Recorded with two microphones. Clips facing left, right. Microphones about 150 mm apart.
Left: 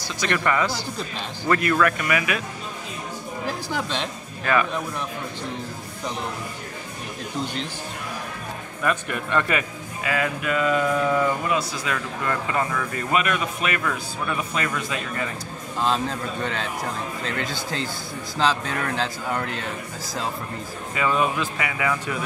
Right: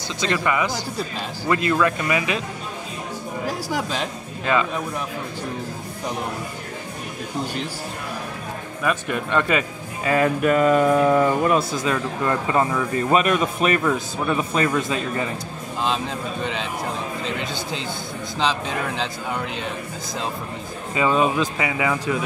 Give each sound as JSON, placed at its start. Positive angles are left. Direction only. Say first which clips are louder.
{"t": 0.4, "sound": "speech", "louder": "right 1 dB", "side_deg": -15}
{"t": 3.4, "sound": "speech", "louder": "right 2 dB", "side_deg": -10}
{"t": 4.5, "sound": "speech", "louder": "right 1 dB", "side_deg": -20}
{"t": 8.8, "sound": "speech", "louder": "right 2 dB", "side_deg": -20}
{"t": 10.0, "sound": "speech", "louder": "right 7 dB", "side_deg": -40}
{"t": 11.8, "sound": "speech", "louder": "right 5 dB", "side_deg": -25}
{"t": 17.4, "sound": "speech", "louder": "right 1 dB", "side_deg": 0}
{"t": 20.9, "sound": "speech", "louder": "right 3 dB", "side_deg": -25}